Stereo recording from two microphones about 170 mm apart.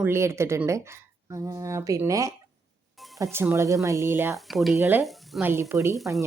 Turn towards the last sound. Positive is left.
turn(degrees=-15)  # may be behind; listen again after turning